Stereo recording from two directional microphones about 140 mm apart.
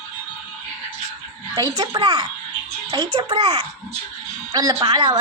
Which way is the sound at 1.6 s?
30° right (ahead or behind).